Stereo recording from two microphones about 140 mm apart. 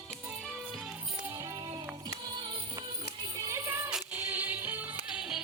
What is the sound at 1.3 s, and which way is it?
Music, 25° right (ahead or behind).